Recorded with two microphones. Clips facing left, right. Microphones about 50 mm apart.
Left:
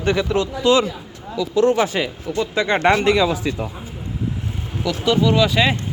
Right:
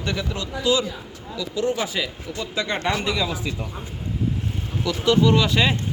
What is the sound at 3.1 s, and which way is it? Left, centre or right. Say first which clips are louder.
Speech: left 7 dB; left.